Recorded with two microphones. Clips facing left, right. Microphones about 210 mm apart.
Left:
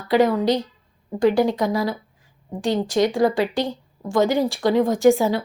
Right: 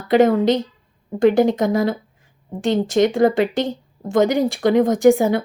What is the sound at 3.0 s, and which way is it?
Speech, 50° right (ahead or behind).